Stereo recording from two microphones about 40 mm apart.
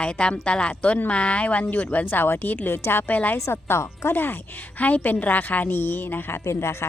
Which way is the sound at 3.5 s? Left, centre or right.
Left.